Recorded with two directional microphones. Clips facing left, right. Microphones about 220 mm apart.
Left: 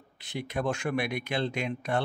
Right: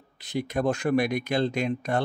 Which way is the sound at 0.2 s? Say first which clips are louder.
Right 5 dB; 40° right (ahead or behind).